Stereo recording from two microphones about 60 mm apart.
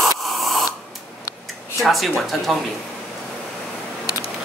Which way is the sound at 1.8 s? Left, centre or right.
Centre.